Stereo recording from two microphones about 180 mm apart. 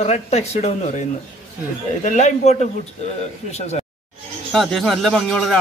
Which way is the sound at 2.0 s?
40° left (ahead or behind).